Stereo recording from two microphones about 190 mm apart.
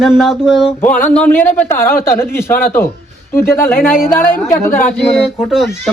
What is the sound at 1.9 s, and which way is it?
Speech, 50° left (ahead or behind).